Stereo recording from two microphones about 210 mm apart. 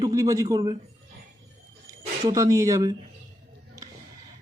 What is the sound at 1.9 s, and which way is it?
Speech, 15° right (ahead or behind).